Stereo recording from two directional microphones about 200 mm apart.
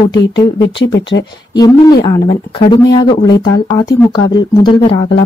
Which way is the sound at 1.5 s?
20° left (ahead or behind).